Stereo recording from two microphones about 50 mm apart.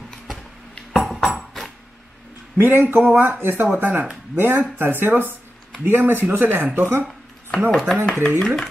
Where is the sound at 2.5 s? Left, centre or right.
Right.